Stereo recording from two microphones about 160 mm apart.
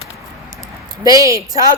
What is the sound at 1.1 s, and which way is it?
Speech, 20° right (ahead or behind).